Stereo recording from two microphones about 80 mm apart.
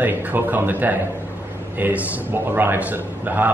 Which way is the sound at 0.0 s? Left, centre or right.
Right.